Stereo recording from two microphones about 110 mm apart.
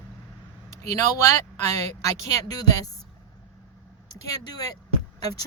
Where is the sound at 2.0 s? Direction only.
35° left (ahead or behind).